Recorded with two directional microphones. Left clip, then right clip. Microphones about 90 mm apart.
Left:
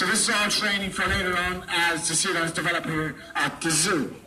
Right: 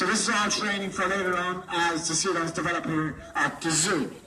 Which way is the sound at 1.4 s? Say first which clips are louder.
Left 2 dB; 10° left (ahead or behind).